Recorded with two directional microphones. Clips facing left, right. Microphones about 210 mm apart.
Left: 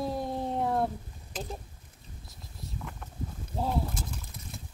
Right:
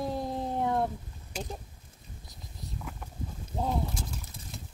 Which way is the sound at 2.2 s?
Centre (ahead or behind).